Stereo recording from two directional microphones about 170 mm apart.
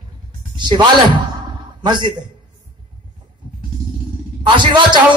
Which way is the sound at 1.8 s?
25° right (ahead or behind).